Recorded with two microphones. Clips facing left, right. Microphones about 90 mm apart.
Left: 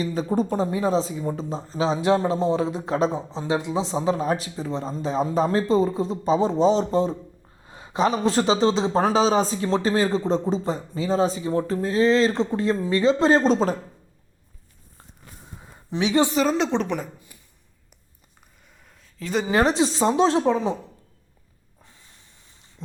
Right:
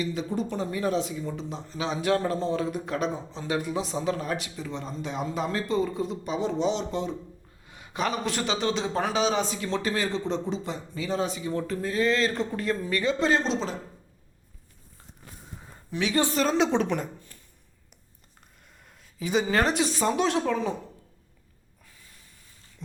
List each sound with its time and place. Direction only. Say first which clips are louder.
0.0 s a man's voice: left 5 dB; 40° left (ahead or behind)
1.2 s a man's voice: left 6 dB; 40° left (ahead or behind)
15.9 s speech: left 5 dB; 20° left (ahead or behind)
16.3 s a woman's voice: left 2 dB; 5° left (ahead or behind)
18.9 s a sound: even; centre (ahead or behind)
19.5 s speech: left 9 dB; 20° left (ahead or behind)